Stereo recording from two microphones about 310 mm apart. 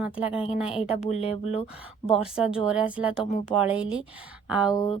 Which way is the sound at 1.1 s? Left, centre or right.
Left.